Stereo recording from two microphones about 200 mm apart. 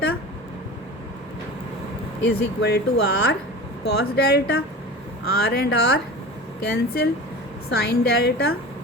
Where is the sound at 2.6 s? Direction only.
55° left (ahead or behind).